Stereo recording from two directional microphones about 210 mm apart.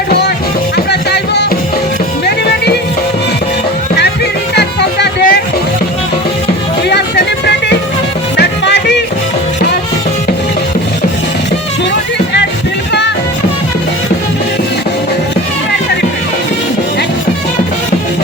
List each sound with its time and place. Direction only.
0.9 s music: 55° left (ahead or behind)
4.5 s music: 50° left (ahead or behind)
8.4 s music: 55° left (ahead or behind)